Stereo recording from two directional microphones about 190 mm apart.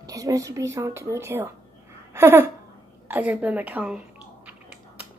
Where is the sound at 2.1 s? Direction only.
10° right (ahead or behind).